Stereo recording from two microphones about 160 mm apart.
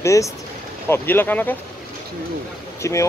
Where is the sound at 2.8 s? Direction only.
20° left (ahead or behind).